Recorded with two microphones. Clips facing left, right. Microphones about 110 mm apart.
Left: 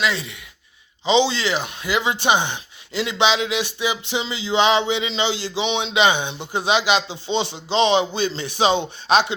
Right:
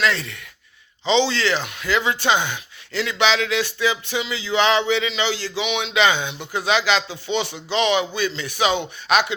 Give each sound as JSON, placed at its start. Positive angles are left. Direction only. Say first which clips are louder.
{"t": 0.0, "sound": "speech", "louder": "right 1 dB", "side_deg": 10}